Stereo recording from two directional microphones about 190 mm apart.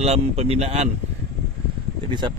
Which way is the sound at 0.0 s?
35° right (ahead or behind).